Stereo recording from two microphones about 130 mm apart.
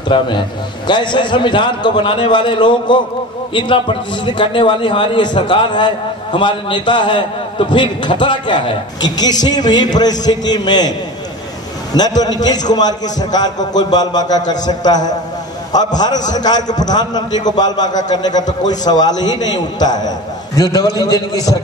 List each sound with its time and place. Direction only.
0.1 s a man's voice: 40° left (ahead or behind)
12.2 s a man's voice: 30° left (ahead or behind)